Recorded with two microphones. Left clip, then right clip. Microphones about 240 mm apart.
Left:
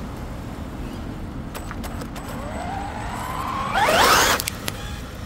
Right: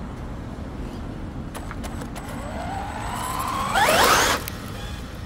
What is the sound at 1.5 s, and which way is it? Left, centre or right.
Vehicle, centre.